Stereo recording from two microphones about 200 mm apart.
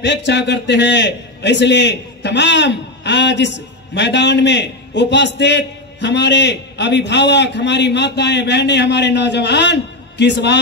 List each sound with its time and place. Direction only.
0.0 s a man's voice: 60° left (ahead or behind)